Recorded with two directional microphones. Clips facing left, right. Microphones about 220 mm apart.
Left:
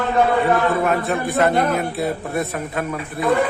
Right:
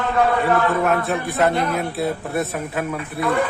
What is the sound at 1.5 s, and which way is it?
Speech, 45° left (ahead or behind).